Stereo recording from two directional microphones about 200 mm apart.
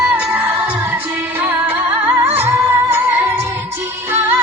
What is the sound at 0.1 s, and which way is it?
Music, 5° right (ahead or behind).